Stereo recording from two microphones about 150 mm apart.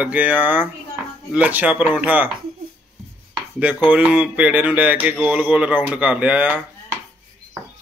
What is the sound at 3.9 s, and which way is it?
Speech, 10° right (ahead or behind).